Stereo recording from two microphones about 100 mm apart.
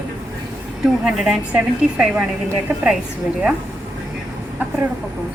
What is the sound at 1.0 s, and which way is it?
A woman's voice, 10° right (ahead or behind).